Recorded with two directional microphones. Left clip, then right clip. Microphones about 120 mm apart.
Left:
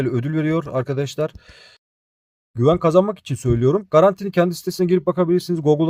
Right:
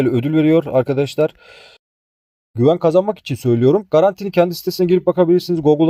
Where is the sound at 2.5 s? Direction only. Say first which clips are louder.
Right 2 dB; 10° right (ahead or behind).